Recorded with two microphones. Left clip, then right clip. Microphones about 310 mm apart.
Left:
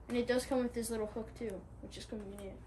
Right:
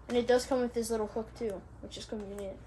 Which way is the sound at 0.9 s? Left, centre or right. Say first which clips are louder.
Right 6 dB; centre.